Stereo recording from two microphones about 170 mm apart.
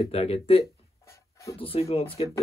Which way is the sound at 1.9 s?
35° left (ahead or behind).